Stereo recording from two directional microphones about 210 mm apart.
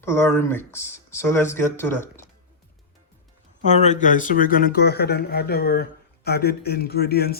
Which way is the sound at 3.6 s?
35° left (ahead or behind).